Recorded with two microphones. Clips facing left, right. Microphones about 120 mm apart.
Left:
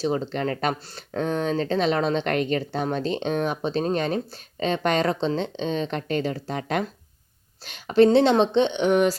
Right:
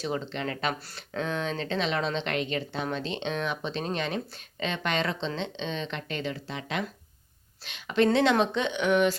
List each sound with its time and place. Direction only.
0.0 s speech: 40° left (ahead or behind)